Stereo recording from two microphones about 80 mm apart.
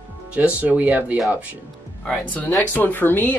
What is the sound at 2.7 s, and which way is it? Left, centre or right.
Speech, left.